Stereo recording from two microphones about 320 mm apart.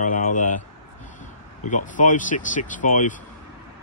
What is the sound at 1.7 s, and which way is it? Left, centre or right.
Speech, left.